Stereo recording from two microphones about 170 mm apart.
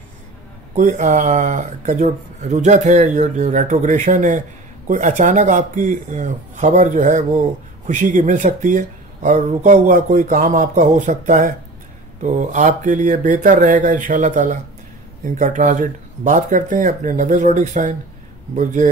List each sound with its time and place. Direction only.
0.7 s speech: 45° right (ahead or behind)